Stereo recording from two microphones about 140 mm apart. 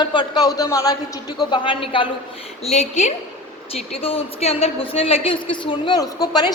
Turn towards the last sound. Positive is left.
turn(degrees=30)  # may be behind; listen again after turning